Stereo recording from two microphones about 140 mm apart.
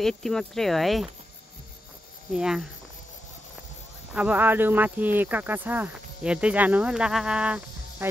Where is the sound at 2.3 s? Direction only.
5° right (ahead or behind).